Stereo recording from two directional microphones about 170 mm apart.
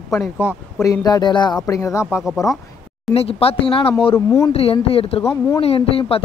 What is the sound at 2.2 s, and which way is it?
Speech, centre (ahead or behind).